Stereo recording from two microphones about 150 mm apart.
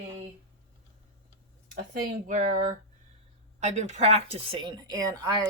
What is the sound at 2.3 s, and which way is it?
A woman's voice, 55° right (ahead or behind).